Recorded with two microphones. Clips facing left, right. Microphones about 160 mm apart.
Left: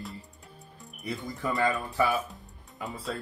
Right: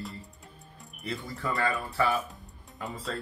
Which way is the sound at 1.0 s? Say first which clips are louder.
Left 1 dB; 15° left (ahead or behind).